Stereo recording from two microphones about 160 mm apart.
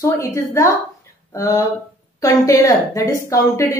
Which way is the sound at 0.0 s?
20° left (ahead or behind).